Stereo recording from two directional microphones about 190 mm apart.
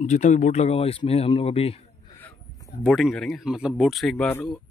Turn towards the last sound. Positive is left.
turn(degrees=10)  # may be behind; listen again after turning